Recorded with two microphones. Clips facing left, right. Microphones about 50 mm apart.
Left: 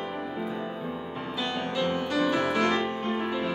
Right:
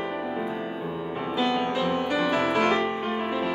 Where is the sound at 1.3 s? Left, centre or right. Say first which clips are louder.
Right 5 dB; right.